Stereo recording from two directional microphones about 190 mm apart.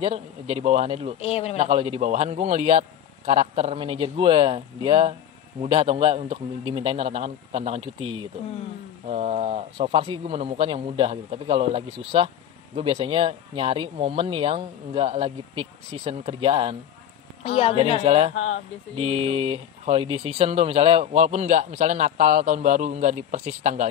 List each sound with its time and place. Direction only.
0.0 s speech: 30° right (ahead or behind)
1.2 s a man's voice: 35° left (ahead or behind)
1.6 s speech: 30° right (ahead or behind)
17.4 s speech: 30° left (ahead or behind)
18.0 s speech: 30° right (ahead or behind)
18.3 s speech: 90° left
18.9 s speech: 30° right (ahead or behind)